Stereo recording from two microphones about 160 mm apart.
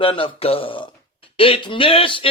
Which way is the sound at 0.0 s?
35° left (ahead or behind).